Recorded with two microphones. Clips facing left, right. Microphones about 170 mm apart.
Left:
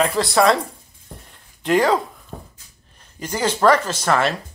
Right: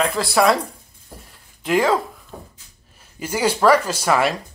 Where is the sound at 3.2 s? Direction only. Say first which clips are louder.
Even; 10° right (ahead or behind).